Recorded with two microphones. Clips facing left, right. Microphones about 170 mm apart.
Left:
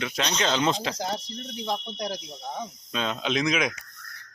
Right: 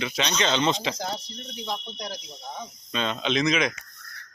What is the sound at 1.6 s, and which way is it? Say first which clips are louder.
Speech: left 3 dB; 40° left (ahead or behind).